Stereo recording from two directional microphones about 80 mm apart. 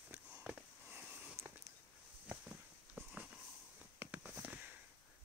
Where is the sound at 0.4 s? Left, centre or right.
Centre.